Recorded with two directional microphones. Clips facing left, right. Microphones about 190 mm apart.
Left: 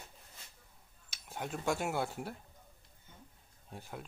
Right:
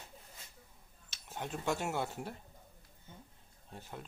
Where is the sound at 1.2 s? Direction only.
10° left (ahead or behind).